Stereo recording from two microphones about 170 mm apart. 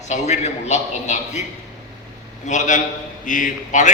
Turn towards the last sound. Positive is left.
turn(degrees=50)  # may be behind; listen again after turning